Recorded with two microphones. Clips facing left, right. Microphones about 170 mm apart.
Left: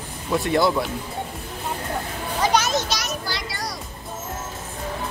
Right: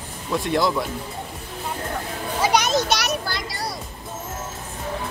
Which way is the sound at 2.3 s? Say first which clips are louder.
Even; 10° right (ahead or behind).